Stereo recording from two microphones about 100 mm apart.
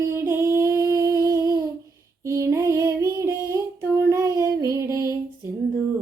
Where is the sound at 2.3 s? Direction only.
30° right (ahead or behind).